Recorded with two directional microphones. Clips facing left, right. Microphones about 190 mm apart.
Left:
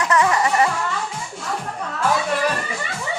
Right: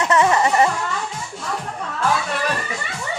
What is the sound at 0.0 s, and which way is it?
Music, 25° right (ahead or behind).